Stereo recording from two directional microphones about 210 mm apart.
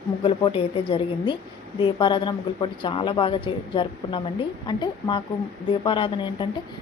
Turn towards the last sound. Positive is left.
turn(degrees=20)  # may be behind; listen again after turning